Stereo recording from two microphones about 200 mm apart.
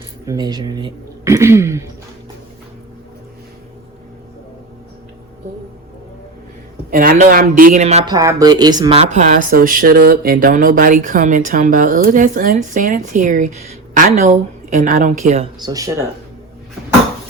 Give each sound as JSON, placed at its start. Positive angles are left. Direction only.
{"t": 0.3, "sound": "speech", "side_deg": -20}
{"t": 6.9, "sound": "a man's voice", "side_deg": -45}
{"t": 8.0, "sound": "speech", "side_deg": -15}
{"t": 15.6, "sound": "speech", "side_deg": -15}